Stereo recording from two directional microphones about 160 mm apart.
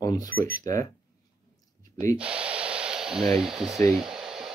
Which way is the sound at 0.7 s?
20° left (ahead or behind).